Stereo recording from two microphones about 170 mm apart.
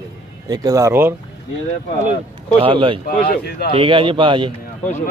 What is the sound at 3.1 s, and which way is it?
Speech, 60° left (ahead or behind).